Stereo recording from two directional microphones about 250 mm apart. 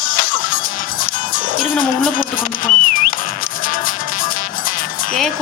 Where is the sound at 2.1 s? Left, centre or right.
Left.